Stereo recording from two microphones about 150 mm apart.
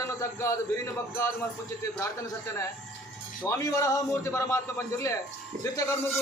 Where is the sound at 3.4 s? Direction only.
20° left (ahead or behind).